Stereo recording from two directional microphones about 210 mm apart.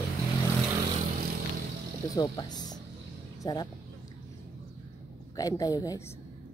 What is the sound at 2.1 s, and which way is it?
Speech, 20° left (ahead or behind).